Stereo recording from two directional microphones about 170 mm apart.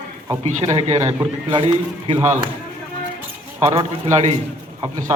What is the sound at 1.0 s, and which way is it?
Speech, 20° right (ahead or behind).